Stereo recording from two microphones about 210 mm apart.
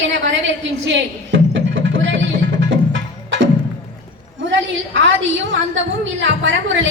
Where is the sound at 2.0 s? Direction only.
60° right (ahead or behind).